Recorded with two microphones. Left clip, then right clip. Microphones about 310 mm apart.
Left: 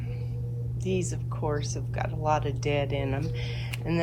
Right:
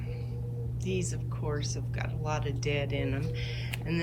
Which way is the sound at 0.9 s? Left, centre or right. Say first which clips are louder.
Left 4 dB; centre.